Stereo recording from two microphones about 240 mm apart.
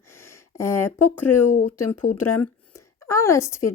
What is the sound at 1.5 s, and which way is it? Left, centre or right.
Speech, left.